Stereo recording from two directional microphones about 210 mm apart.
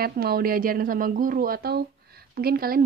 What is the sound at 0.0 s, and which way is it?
Speech, 45° right (ahead or behind).